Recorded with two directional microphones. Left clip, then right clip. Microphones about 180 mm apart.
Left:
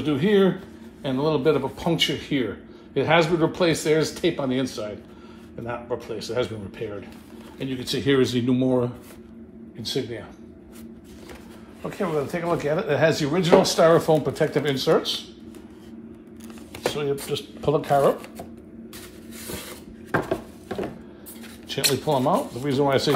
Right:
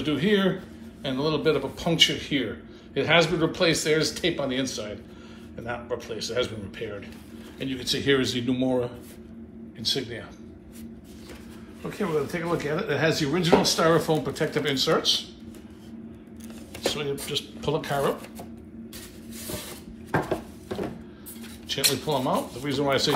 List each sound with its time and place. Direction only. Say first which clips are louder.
0.0 s speech: left 4 dB; 50° left (ahead or behind)
5.7 s speech: left 2 dB; 45° left (ahead or behind)
11.8 s speech: left 2 dB; 45° left (ahead or behind)
17.3 s speech: left 4 dB; 40° left (ahead or behind)
21.6 s speech: left 2 dB; 45° left (ahead or behind)